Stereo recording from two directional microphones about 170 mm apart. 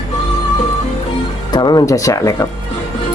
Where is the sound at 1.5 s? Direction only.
25° left (ahead or behind).